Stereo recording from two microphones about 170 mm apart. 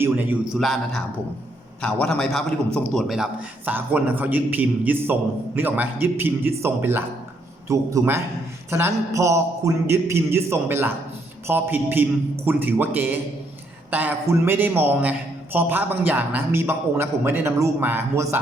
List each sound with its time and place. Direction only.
0.0 s a man's voice: 10° right (ahead or behind)